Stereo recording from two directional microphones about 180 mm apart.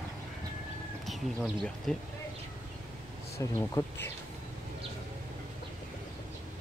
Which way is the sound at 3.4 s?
15° left (ahead or behind).